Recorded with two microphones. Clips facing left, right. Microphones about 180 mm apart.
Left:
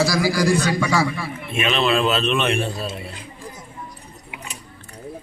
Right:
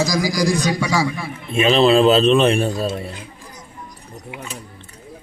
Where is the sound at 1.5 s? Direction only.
35° right (ahead or behind).